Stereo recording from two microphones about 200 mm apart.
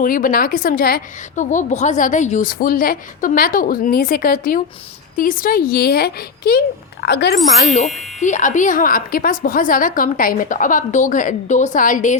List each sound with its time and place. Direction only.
0.0 s a woman's voice: 45° left (ahead or behind)
7.6 s a woman's voice: 40° left (ahead or behind)